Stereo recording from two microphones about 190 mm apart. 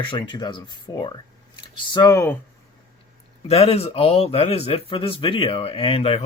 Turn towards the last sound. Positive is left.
turn(degrees=30)  # may be behind; listen again after turning